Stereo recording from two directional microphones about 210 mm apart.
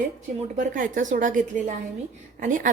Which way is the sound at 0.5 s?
35° right (ahead or behind).